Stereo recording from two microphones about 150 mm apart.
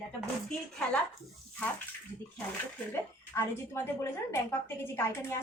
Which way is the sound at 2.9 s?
15° left (ahead or behind).